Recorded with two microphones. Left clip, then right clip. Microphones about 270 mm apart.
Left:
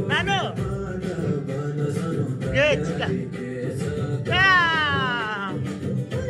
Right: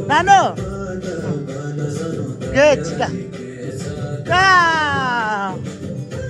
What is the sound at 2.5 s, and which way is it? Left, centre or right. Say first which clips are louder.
Speech: right 8 dB; right.